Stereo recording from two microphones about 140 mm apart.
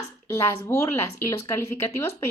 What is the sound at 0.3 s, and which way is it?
Speech, 20° left (ahead or behind).